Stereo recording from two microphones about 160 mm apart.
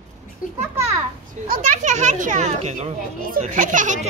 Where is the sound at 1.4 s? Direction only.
50° right (ahead or behind).